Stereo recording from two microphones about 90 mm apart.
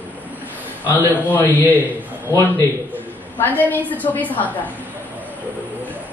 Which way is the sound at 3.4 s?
20° left (ahead or behind).